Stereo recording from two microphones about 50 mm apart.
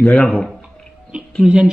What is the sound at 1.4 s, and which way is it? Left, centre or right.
Speech, centre.